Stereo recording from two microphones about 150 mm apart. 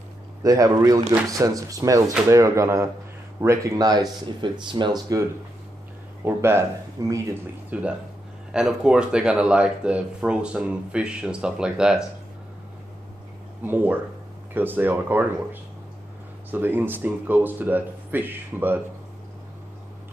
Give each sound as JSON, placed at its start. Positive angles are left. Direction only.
{"t": 0.4, "sound": "speech", "side_deg": -25}
{"t": 6.2, "sound": "speech", "side_deg": -15}
{"t": 7.7, "sound": "speech", "side_deg": -10}
{"t": 13.6, "sound": "speech", "side_deg": -10}
{"t": 16.4, "sound": "speech", "side_deg": -15}